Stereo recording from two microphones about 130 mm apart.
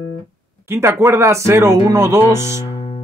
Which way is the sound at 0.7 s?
20° right (ahead or behind).